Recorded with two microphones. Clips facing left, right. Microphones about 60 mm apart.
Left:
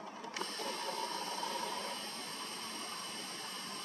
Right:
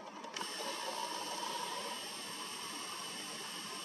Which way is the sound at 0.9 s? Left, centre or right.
Left.